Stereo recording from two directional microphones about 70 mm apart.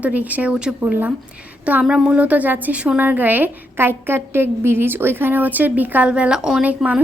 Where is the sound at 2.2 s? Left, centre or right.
Right.